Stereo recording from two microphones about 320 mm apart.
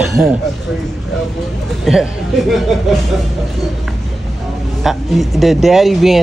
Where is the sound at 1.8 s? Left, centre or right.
Centre.